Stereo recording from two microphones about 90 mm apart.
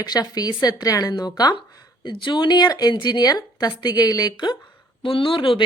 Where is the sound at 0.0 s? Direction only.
45° left (ahead or behind).